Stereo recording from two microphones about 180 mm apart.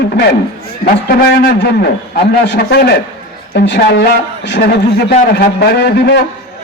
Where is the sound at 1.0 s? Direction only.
55° left (ahead or behind).